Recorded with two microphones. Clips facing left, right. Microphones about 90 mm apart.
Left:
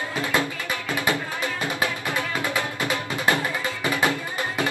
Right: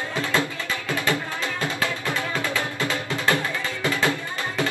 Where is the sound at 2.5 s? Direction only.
15° left (ahead or behind).